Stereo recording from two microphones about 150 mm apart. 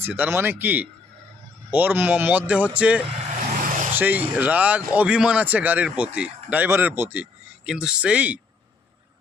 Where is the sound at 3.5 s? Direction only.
60° right (ahead or behind).